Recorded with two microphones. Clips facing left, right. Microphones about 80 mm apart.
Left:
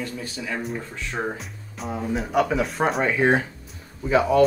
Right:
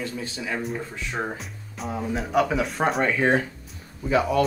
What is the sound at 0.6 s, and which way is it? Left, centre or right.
Speech, centre.